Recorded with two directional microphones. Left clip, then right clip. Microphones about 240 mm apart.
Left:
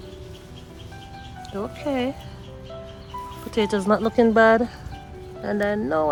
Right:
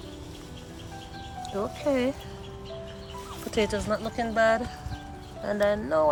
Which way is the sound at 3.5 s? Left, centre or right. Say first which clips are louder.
Left 6 dB; centre.